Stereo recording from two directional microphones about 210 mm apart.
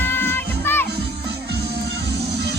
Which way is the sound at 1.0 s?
50° right (ahead or behind).